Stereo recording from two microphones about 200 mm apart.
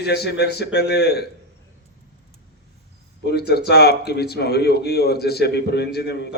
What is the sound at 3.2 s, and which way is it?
Speech, 55° left (ahead or behind).